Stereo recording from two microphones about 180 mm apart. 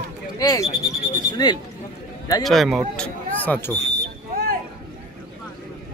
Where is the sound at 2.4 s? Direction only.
Centre (ahead or behind).